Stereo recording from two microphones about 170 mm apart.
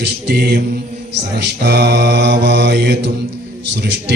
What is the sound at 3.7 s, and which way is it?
Speech, 85° right.